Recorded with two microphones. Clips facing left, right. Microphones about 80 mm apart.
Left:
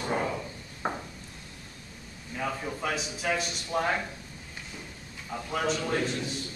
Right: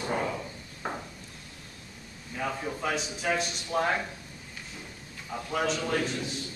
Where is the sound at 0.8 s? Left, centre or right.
Left.